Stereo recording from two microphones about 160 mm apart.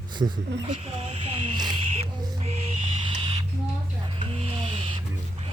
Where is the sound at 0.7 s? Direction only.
40° right (ahead or behind).